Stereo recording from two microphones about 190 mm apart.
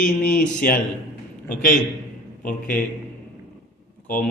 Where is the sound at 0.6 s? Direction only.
50° left (ahead or behind).